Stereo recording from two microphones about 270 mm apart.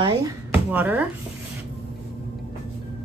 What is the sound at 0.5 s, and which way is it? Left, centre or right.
Speech, centre.